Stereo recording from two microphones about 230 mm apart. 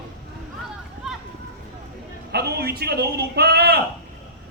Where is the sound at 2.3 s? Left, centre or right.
Right.